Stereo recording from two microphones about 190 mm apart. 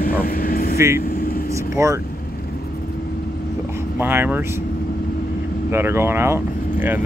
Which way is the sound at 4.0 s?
10° right (ahead or behind).